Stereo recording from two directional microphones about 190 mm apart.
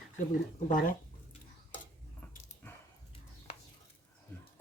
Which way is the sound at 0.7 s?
45° left (ahead or behind).